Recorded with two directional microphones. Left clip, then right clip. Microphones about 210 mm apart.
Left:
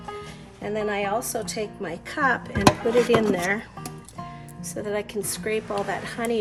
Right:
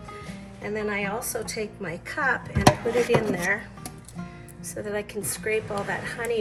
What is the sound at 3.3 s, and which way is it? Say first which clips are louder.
Speech: left 1 dB; 55° left (ahead or behind).